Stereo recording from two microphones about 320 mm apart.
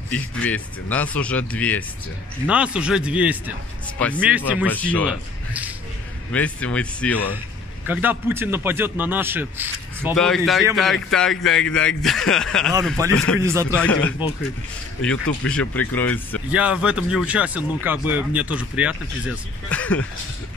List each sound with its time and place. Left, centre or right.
0.1 s a man's voice: centre
13.4 s a man's voice: centre
13.7 s speech: centre